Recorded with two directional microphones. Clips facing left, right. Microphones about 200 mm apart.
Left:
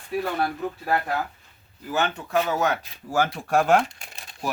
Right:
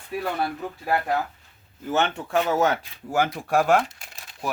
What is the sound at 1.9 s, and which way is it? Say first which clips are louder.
Speech: right 1 dB; 25° right (ahead or behind).